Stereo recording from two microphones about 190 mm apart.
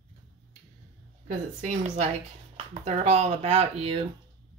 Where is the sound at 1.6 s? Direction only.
40° right (ahead or behind).